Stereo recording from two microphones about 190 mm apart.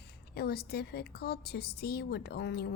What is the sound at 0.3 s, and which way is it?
A woman's voice, 55° left (ahead or behind).